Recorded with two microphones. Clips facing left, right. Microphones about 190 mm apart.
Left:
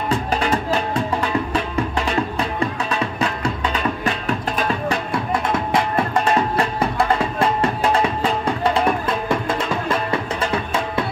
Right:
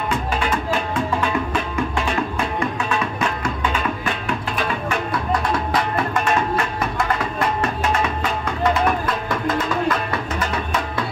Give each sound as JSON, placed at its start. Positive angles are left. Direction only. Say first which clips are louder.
{"t": 0.1, "sound": "music", "louder": "left 3 dB", "side_deg": 35}
{"t": 4.0, "sound": "music", "louder": "left 2 dB", "side_deg": 40}